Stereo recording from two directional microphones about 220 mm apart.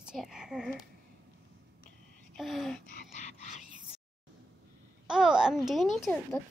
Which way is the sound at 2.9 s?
35° left (ahead or behind).